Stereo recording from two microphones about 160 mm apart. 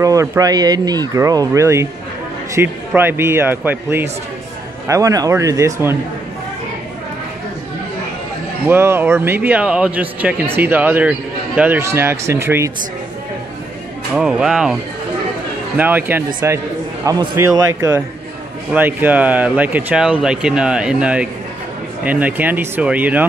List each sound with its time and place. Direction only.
0.0 s speech: 20° right (ahead or behind)
8.6 s speech: 15° right (ahead or behind)
14.1 s speech: 5° right (ahead or behind)
15.8 s speech: 10° right (ahead or behind)